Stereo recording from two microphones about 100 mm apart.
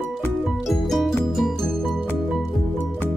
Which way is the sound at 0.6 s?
Centre (ahead or behind).